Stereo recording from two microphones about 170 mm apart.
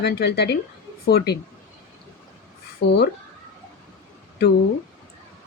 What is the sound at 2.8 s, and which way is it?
Speech, 75° left (ahead or behind).